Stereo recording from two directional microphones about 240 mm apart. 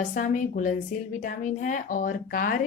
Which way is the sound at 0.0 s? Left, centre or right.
Left.